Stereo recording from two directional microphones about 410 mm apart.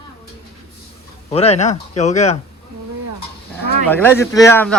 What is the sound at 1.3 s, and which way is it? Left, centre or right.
Speech, centre.